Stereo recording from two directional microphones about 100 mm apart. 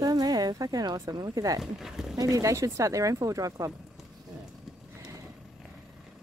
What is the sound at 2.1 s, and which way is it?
Speech, 35° right (ahead or behind).